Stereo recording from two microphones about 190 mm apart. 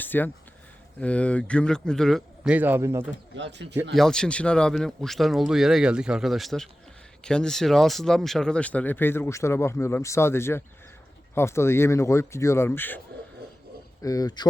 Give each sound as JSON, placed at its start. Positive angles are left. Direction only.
{"t": 0.0, "sound": "speech", "side_deg": 10}
{"t": 3.3, "sound": "speech", "side_deg": -70}
{"t": 3.9, "sound": "speech", "side_deg": 5}
{"t": 14.0, "sound": "speech", "side_deg": 20}